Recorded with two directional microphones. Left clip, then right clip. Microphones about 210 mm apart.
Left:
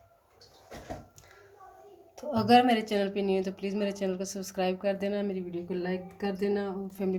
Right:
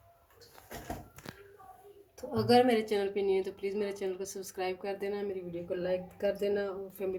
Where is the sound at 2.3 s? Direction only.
30° left (ahead or behind).